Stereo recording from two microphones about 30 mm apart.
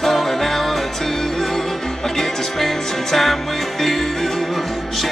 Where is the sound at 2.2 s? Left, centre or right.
Centre.